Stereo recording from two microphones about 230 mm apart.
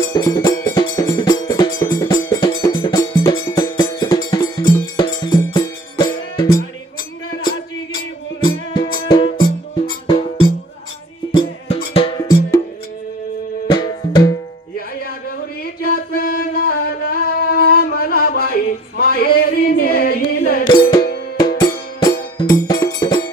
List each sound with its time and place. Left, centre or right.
0.0 s music: centre
9.0 s music: left
13.7 s music: centre
15.6 s music: left
20.6 s music: left